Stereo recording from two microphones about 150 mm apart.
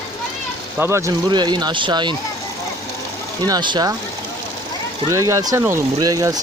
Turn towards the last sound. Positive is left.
turn(degrees=-25)  # may be behind; listen again after turning